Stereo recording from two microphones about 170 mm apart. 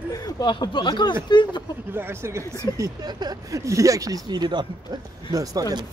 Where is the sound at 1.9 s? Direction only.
15° right (ahead or behind).